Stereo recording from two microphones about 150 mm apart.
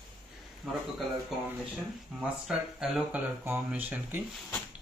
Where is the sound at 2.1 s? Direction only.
5° right (ahead or behind).